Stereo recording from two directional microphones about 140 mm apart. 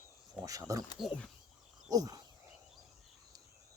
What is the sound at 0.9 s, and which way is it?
Speech, 5° left (ahead or behind).